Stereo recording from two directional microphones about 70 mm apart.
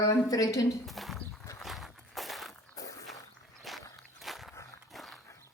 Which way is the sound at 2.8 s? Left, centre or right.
Left.